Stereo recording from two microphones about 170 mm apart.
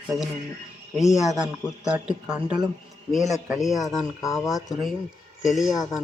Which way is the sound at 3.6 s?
Centre (ahead or behind).